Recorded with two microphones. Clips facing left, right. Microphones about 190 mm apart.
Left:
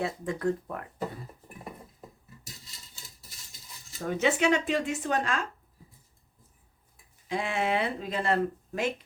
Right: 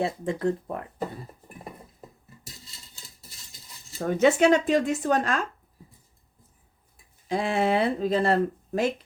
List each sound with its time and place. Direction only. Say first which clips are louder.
0.0 s speech: right 3 dB; 25° right (ahead or behind)
4.0 s speech: right 6 dB; 40° right (ahead or behind)
7.3 s speech: right 5 dB; 35° right (ahead or behind)